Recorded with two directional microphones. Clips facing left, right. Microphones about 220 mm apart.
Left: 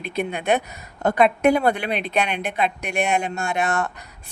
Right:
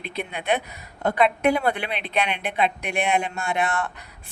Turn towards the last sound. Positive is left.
turn(degrees=45)  # may be behind; listen again after turning